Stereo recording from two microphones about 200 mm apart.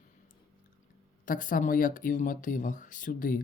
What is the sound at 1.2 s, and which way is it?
Speech, 45° left (ahead or behind).